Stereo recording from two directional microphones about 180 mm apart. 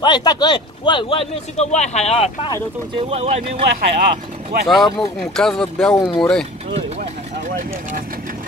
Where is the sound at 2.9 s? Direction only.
35° right (ahead or behind).